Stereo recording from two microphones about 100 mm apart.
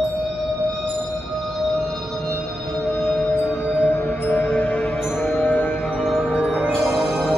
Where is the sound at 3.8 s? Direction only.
15° left (ahead or behind).